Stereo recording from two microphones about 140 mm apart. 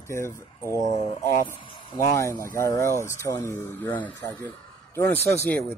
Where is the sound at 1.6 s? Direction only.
35° left (ahead or behind).